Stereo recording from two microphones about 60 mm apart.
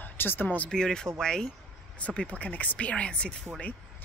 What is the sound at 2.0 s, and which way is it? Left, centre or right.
Speech, left.